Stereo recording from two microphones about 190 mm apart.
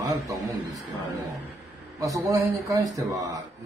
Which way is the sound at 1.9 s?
15° right (ahead or behind).